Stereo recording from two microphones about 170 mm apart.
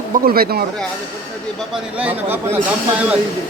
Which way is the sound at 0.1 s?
60° right (ahead or behind).